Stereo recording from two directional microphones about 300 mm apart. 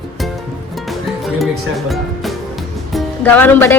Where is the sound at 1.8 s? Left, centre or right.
Centre.